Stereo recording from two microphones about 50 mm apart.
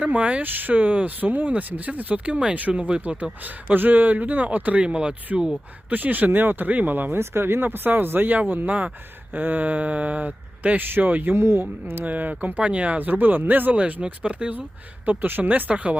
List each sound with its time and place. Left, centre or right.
0.0 s speech: right
0.4 s speech: right
3.4 s speech: right
4.8 s speech: right
5.9 s speech: right
7.2 s speech: right
11.3 s speech: right
12.0 s speech: right